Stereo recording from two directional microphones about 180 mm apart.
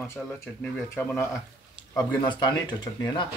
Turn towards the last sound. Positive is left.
turn(degrees=25)  # may be behind; listen again after turning